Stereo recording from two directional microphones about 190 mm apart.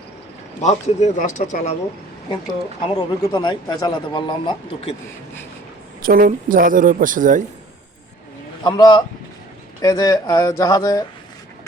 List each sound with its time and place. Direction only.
0.6 s speech: 35° left (ahead or behind)
2.9 s a man's voice: 20° left (ahead or behind)
6.0 s speech: 50° right (ahead or behind)
8.6 s a man's voice: 20° left (ahead or behind)